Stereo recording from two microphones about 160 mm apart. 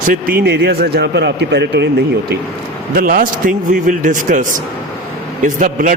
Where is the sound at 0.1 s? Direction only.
65° right (ahead or behind); by 1.9 s 90° right.